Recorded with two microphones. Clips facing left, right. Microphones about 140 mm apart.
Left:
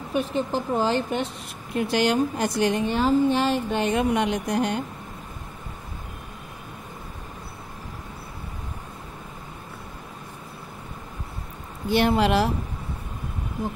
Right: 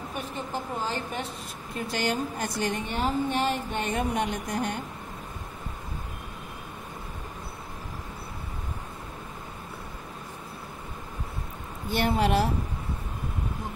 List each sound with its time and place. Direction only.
0.1 s a woman's voice: 85° left
11.9 s a woman's voice: 90° left